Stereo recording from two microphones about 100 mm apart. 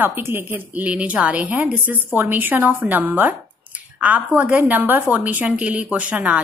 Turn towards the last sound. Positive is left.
turn(degrees=-15)  # may be behind; listen again after turning